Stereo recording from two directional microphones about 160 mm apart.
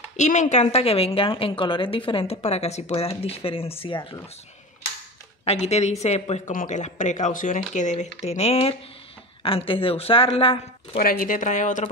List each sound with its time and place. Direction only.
0.2 s a woman's voice: 50° left (ahead or behind); by 4.2 s 30° left (ahead or behind)
5.4 s speech: 40° left (ahead or behind)
6.5 s a woman's voice: 55° left (ahead or behind); by 11.0 s 35° left (ahead or behind)
11.0 s speech: 65° left (ahead or behind)